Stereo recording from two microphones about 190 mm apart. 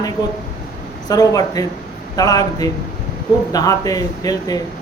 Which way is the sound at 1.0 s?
20° left (ahead or behind).